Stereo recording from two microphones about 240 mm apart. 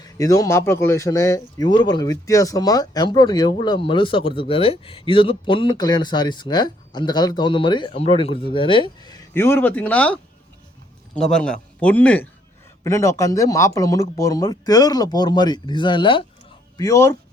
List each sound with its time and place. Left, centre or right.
0.0 s a man's voice: centre